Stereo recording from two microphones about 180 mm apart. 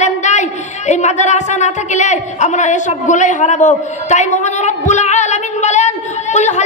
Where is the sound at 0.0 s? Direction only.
40° left (ahead or behind).